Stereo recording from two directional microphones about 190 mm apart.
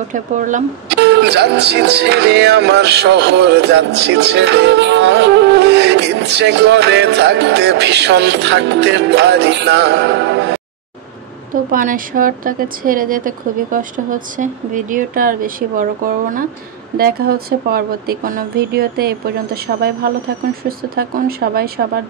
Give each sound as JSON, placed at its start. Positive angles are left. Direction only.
{"t": 0.1, "sound": "speech", "side_deg": -40}
{"t": 0.8, "sound": "music", "side_deg": -65}
{"t": 11.7, "sound": "a woman's voice", "side_deg": -45}